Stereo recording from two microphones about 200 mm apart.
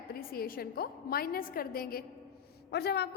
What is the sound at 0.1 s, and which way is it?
A woman's voice, 50° left (ahead or behind).